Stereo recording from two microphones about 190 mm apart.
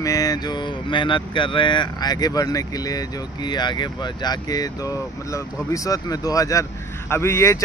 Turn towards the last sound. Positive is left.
turn(degrees=15)  # may be behind; listen again after turning